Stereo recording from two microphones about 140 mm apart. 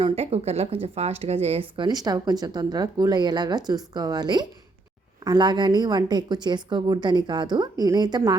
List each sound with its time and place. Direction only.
0.0 s speech: 45° right (ahead or behind); by 8.4 s 30° right (ahead or behind)